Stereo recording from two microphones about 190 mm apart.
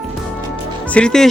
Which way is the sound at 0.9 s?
5° left (ahead or behind).